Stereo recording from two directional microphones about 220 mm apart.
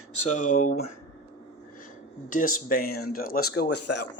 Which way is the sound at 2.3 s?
40° left (ahead or behind).